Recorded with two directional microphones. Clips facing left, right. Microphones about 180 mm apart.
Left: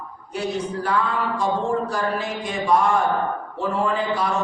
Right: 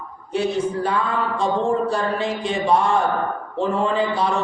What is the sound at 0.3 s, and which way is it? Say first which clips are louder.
A man's voice: right 5 dB; 25° right (ahead or behind).